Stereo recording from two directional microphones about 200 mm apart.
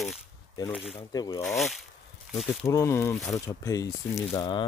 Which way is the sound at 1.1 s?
15° left (ahead or behind).